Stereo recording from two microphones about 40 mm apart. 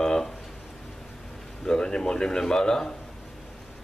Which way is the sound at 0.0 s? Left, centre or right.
Centre.